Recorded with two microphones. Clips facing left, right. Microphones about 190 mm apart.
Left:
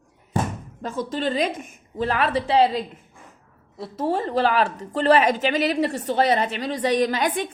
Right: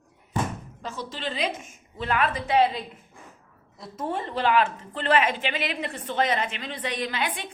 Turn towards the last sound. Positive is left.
turn(degrees=45)  # may be behind; listen again after turning